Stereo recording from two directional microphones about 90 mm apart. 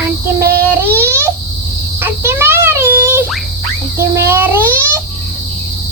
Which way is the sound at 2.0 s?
25° right (ahead or behind).